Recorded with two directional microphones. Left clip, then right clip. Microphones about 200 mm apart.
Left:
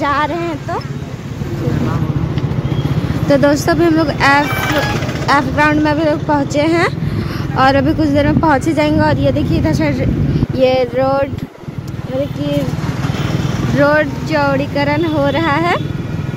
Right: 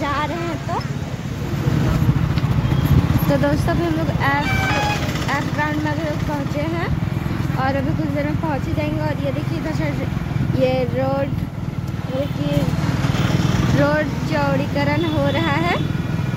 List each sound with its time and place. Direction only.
0.0 s a sound: 25° left (ahead or behind)
3.3 s speech: 20° left (ahead or behind)
10.6 s speech: 35° left (ahead or behind)
13.7 s speech: 30° left (ahead or behind)